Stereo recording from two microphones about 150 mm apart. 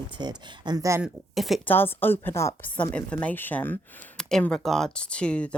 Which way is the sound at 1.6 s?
15° left (ahead or behind).